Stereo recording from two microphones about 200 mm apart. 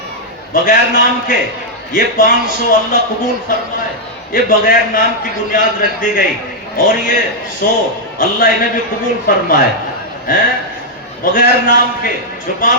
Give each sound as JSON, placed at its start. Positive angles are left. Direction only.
{"t": 0.5, "sound": "a man's voice", "side_deg": 45}
{"t": 4.3, "sound": "a man's voice", "side_deg": 45}